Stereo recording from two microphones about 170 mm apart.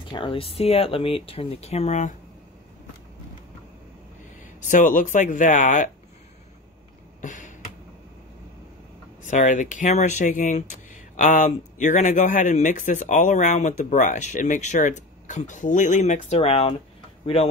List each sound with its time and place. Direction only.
0.1 s speech: 30° left (ahead or behind)
4.6 s speech: 45° left (ahead or behind)
7.2 s a sound: 45° left (ahead or behind)
9.2 s speech: 45° left (ahead or behind)